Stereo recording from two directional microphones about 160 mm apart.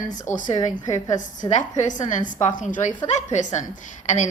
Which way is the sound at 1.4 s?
50° left (ahead or behind).